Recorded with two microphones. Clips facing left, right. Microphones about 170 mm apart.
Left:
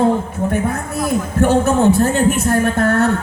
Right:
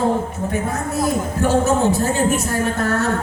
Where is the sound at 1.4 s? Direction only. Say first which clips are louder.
Left 4 dB; 60° left (ahead or behind).